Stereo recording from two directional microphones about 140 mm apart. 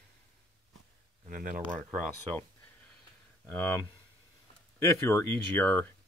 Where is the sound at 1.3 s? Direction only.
75° right (ahead or behind).